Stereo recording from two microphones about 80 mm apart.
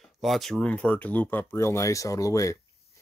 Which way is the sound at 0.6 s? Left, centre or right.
Centre.